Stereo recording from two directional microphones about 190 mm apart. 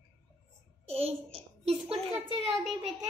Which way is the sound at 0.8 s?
30° right (ahead or behind).